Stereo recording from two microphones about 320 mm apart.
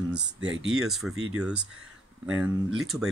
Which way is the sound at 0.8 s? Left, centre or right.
Centre.